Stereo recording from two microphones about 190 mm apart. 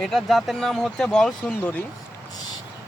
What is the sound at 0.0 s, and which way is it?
Speech, centre (ahead or behind).